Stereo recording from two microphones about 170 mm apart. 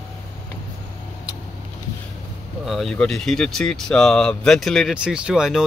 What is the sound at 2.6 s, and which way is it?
Speech, centre (ahead or behind).